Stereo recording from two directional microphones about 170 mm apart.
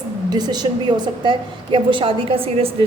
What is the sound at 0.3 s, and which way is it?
A woman's voice, 25° right (ahead or behind).